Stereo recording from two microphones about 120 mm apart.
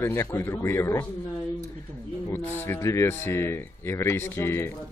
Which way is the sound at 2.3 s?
20° left (ahead or behind).